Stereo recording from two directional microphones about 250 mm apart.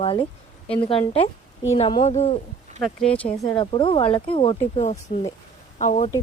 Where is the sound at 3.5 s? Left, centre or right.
Centre.